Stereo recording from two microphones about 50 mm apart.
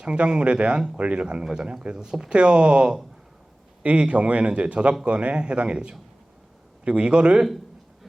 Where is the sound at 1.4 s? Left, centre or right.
Centre.